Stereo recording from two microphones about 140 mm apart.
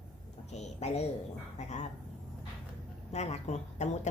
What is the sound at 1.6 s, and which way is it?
Dog, 55° left (ahead or behind).